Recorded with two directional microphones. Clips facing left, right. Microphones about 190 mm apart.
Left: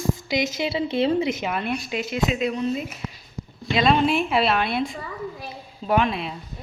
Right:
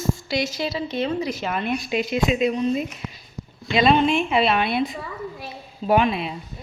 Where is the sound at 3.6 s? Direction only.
Centre (ahead or behind).